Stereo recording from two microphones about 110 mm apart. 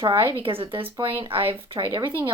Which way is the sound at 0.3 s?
55° right (ahead or behind).